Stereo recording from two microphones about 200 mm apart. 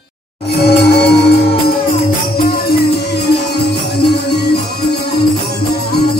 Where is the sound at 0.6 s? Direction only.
55° left (ahead or behind).